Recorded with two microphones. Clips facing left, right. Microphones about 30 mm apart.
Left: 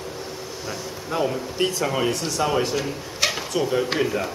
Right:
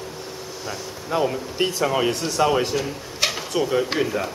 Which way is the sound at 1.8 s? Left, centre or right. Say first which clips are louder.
Right 2 dB; centre.